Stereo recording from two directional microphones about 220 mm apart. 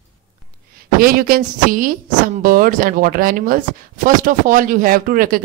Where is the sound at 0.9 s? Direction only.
40° right (ahead or behind).